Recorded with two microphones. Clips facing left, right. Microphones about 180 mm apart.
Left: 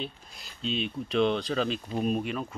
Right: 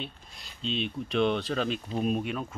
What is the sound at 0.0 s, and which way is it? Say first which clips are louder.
Speech: left 3 dB; centre (ahead or behind).